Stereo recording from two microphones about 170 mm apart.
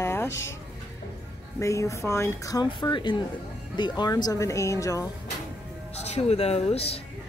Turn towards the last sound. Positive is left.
turn(degrees=35)  # may be behind; listen again after turning